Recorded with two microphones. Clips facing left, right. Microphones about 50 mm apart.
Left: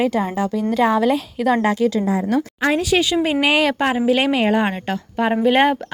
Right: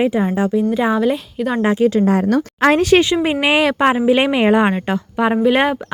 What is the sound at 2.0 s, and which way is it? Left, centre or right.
Speech, right.